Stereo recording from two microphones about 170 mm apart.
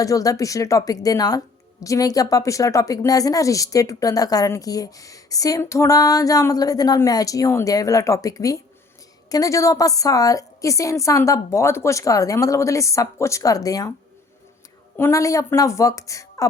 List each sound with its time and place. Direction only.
0.0 s speech: 20° left (ahead or behind)
14.9 s speech: 15° left (ahead or behind)